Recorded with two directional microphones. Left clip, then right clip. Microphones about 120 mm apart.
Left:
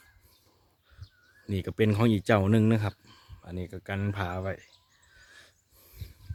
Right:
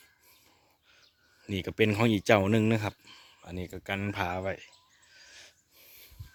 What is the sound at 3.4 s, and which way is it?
Speech, 15° left (ahead or behind).